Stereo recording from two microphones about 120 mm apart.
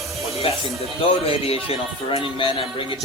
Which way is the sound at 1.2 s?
55° left (ahead or behind).